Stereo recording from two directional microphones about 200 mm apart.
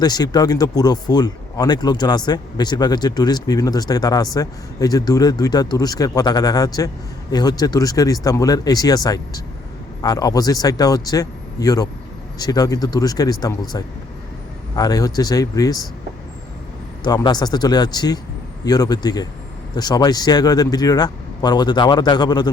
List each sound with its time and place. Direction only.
0.0 s speech: 20° left (ahead or behind)
17.0 s speech: 20° left (ahead or behind)